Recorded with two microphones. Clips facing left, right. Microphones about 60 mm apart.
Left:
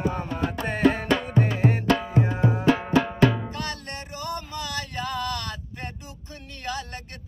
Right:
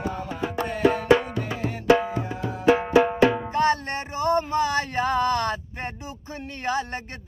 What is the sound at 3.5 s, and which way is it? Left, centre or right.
Music, right.